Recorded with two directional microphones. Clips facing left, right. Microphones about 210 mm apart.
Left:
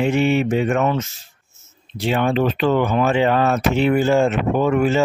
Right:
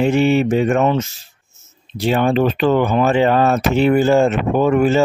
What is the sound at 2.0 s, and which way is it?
Speech, 40° right (ahead or behind).